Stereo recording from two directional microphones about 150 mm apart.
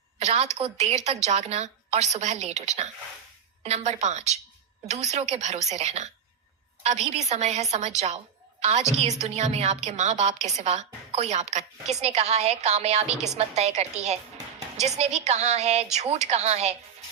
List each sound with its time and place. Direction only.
0.2 s a woman's voice: 50° right (ahead or behind)
9.2 s a woman's voice: 45° right (ahead or behind)